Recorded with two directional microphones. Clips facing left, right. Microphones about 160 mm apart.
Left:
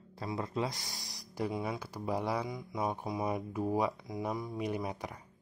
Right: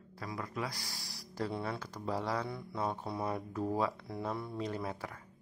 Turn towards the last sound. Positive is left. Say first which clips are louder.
# left 2 dB
turn(degrees=15)  # may be behind; listen again after turning